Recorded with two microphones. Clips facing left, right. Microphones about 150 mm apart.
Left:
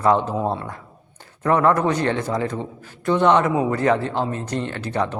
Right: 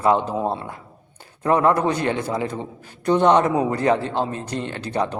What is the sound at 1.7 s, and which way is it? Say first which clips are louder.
Speech: left 1 dB; 30° right (ahead or behind).